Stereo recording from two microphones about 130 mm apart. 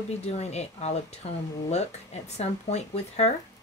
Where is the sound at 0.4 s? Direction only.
55° left (ahead or behind).